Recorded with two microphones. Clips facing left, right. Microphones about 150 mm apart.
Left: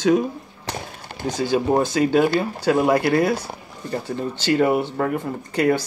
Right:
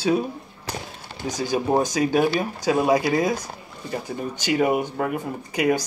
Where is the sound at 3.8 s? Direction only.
10° right (ahead or behind).